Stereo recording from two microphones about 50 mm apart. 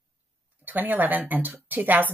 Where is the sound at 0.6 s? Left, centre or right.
Right.